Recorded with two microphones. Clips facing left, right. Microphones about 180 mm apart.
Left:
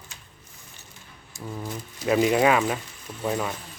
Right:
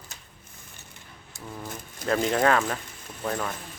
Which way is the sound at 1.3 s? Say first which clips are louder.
Left 5 dB; 60° right (ahead or behind).